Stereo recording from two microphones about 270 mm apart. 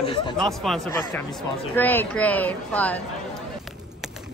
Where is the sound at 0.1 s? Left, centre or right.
Centre.